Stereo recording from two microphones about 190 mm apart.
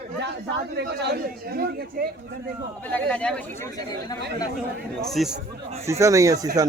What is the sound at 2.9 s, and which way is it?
Speech, 5° left (ahead or behind).